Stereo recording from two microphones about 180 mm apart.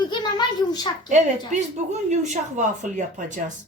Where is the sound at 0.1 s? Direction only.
25° left (ahead or behind).